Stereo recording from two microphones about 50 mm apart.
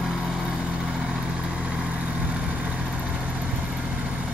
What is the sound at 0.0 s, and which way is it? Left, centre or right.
Vehicle, centre.